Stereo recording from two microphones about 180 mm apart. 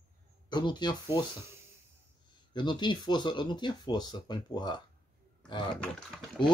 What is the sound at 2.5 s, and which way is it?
Speech, 25° left (ahead or behind).